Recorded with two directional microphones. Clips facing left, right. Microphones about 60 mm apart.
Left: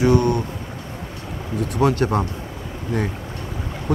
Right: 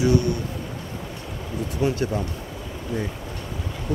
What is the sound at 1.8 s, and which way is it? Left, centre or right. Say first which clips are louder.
Speech: left 5 dB; left.